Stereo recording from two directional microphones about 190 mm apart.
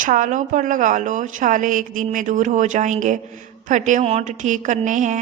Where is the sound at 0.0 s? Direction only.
45° right (ahead or behind).